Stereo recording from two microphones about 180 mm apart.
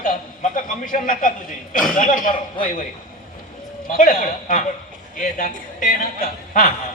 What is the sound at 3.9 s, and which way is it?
A man's voice, 50° left (ahead or behind).